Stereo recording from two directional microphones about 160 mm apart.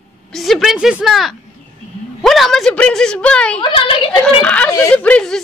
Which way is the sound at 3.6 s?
35° left (ahead or behind).